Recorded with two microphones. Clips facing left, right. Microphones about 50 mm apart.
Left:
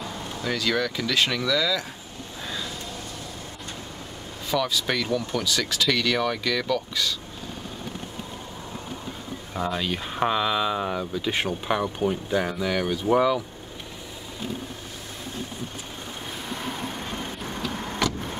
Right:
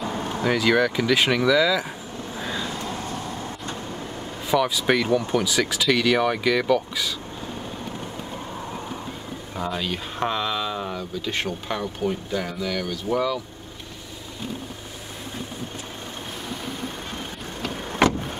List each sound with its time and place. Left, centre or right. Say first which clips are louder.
0.0 s vehicle: right 7 dB; right
0.5 s speech: right 5 dB; centre
2.3 s vehicle: right 4 dB; right
2.6 s vehicle: right 5 dB; right
4.5 s speech: right 4 dB; centre
9.6 s speech: left 1 dB; centre
18.0 s vehicle: right 7 dB; right